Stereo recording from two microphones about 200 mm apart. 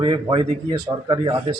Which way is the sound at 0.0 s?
25° right (ahead or behind).